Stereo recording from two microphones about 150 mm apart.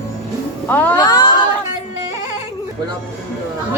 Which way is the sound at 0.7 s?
10° left (ahead or behind).